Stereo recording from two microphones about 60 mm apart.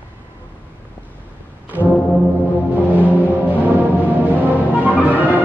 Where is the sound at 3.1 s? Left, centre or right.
Right.